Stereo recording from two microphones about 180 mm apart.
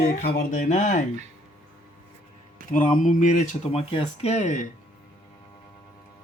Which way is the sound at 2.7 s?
45° left (ahead or behind).